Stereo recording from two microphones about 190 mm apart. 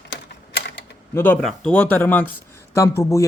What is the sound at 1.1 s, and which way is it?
Speech, 10° left (ahead or behind).